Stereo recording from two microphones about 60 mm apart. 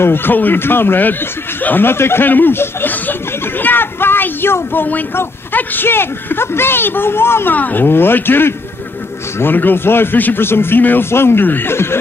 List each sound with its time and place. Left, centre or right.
0.0 s speech: left
2.9 s a sound: left
5.1 s speech: left
7.5 s speech: left